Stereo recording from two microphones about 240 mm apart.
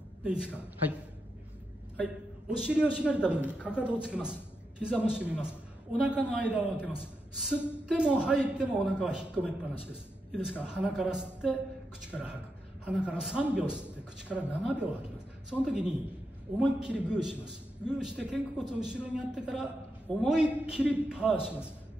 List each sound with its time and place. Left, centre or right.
0.2 s a man's voice: centre
2.0 s a man's voice: centre